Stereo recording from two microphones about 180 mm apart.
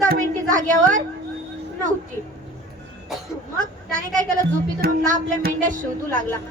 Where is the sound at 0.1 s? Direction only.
50° right (ahead or behind).